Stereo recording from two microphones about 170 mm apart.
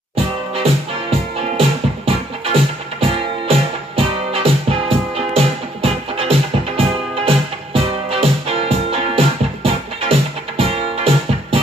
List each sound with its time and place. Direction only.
2.0 s music: 35° right (ahead or behind)